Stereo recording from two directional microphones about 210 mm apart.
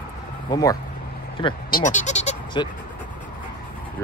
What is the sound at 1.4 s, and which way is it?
Speech, 25° left (ahead or behind).